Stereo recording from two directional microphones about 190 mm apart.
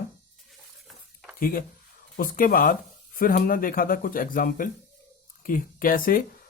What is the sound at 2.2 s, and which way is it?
Speech, 50° left (ahead or behind).